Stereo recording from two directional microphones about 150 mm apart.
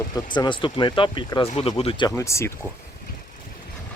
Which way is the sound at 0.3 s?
30° left (ahead or behind).